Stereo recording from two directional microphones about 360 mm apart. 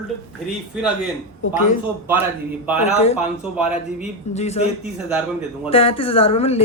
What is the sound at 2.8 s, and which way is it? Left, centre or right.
Speech, centre.